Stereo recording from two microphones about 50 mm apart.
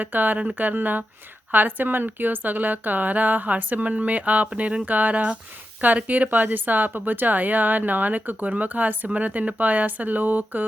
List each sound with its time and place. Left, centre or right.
0.0 s a woman's voice: right